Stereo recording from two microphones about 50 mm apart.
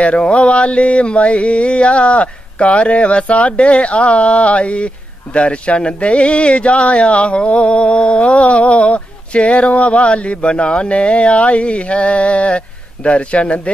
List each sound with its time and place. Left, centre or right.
0.0 s mantra: left